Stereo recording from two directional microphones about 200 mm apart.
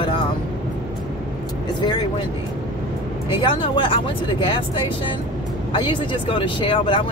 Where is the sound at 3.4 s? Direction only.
25° left (ahead or behind).